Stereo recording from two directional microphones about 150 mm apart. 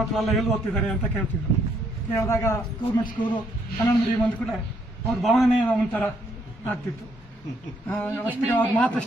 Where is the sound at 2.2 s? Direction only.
20° left (ahead or behind).